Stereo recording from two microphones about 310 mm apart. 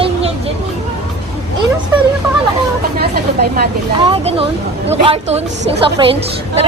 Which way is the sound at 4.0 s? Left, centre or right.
Centre.